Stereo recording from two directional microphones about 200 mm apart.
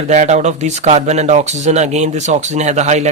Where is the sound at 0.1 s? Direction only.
35° right (ahead or behind).